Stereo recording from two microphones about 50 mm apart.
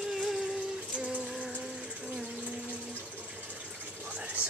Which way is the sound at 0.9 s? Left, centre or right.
Right.